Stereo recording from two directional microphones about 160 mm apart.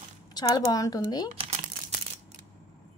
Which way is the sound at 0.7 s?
25° left (ahead or behind).